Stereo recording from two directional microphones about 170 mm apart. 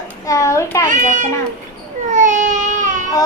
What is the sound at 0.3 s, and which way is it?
Speech, 15° left (ahead or behind).